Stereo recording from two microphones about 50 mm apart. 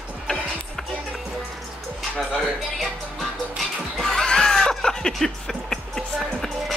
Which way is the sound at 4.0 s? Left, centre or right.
Centre.